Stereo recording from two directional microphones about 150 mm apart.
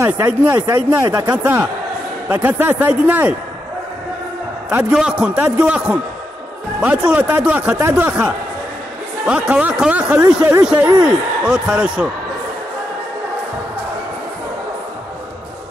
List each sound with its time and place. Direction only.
0.0 s speech: 15° right (ahead or behind)
1.3 s speech: 10° right (ahead or behind)
4.6 s speech: 10° right (ahead or behind)
11.4 s speech: 5° right (ahead or behind)